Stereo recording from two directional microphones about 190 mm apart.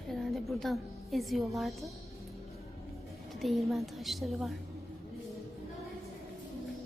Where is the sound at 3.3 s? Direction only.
Centre (ahead or behind).